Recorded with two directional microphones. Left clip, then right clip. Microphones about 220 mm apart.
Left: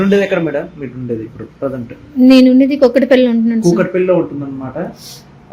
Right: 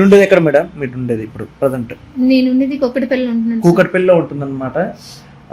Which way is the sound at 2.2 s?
35° left (ahead or behind).